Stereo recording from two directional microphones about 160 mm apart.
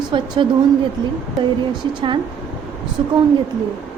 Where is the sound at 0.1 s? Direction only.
35° right (ahead or behind).